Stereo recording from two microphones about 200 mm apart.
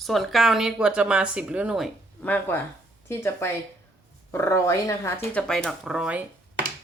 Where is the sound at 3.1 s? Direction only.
10° left (ahead or behind).